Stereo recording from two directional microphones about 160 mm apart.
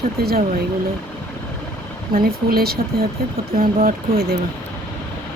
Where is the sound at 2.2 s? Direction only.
75° right (ahead or behind).